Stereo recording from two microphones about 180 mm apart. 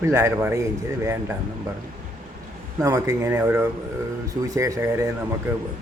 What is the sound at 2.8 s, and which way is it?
A man's voice, 20° right (ahead or behind).